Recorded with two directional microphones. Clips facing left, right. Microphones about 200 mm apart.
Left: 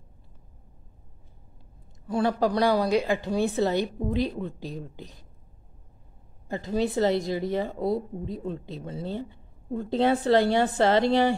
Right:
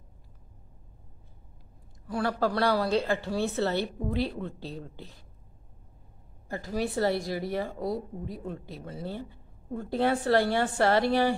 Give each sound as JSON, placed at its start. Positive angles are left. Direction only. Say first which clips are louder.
{"t": 2.0, "sound": "speech", "louder": "left 4 dB", "side_deg": 20}
{"t": 6.5, "sound": "a woman's voice", "louder": "left 4 dB", "side_deg": 20}